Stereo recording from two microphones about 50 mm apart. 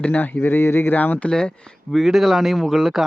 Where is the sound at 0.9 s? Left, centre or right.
Left.